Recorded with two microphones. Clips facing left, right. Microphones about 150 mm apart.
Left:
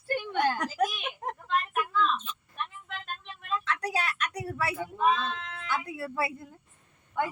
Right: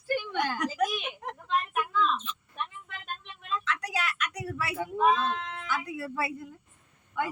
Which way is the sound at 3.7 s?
30° left (ahead or behind).